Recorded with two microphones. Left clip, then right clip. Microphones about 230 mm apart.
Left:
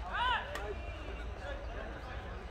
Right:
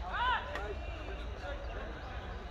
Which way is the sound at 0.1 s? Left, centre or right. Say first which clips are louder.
Even; left.